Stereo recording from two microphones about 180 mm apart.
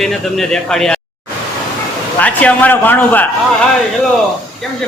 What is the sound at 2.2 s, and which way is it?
A man's voice, 10° left (ahead or behind).